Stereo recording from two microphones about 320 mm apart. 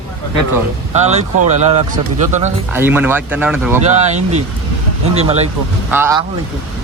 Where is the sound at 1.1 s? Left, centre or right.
Right.